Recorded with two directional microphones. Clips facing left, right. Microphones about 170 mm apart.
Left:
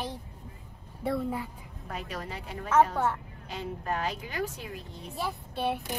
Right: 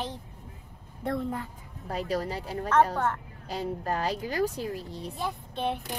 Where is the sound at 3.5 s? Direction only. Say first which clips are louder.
Right 3 dB; 35° right (ahead or behind).